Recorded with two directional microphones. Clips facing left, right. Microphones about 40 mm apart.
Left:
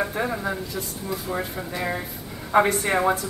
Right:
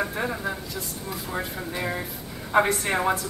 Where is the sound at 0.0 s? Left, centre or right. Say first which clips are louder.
Left 2 dB; centre.